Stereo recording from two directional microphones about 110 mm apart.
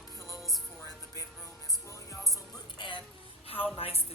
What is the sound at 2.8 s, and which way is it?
Speech, 45° left (ahead or behind).